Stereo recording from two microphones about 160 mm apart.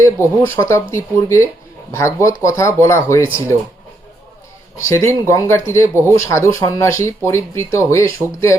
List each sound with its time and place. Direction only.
0.0 s speech: 15° left (ahead or behind)
4.9 s speech: 15° left (ahead or behind)